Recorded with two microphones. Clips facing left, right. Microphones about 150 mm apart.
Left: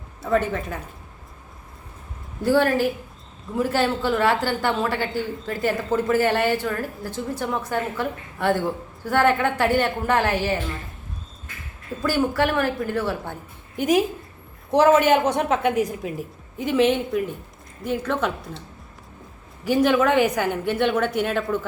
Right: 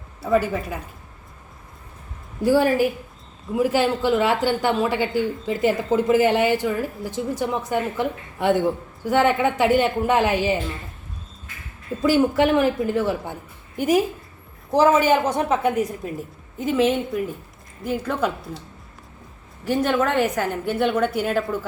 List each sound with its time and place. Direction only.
0.2 s speech: 5° right (ahead or behind)
2.4 s speech: 10° right (ahead or behind)
12.0 s speech: 20° right (ahead or behind)
13.7 s a woman's voice: 5° right (ahead or behind)
19.6 s a woman's voice: centre (ahead or behind)